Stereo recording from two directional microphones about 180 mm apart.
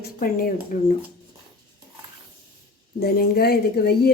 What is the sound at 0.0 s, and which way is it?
Speech, 55° left (ahead or behind).